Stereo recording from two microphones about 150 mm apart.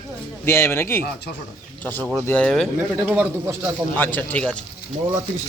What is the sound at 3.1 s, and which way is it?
Speech, 10° right (ahead or behind).